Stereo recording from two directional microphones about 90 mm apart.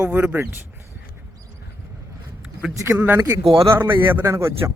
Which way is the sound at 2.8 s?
30° right (ahead or behind).